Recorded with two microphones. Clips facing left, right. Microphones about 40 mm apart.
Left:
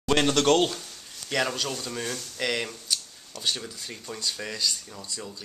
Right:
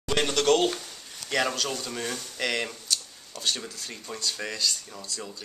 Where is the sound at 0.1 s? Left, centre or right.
Left.